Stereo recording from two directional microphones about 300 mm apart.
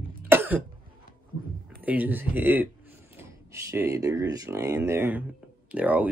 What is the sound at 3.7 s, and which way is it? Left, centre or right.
Speech, centre.